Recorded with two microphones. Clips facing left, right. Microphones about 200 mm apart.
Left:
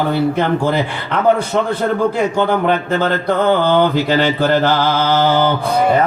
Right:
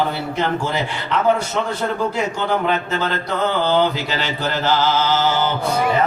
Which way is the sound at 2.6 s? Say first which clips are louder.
Left 5 dB; 50° left (ahead or behind).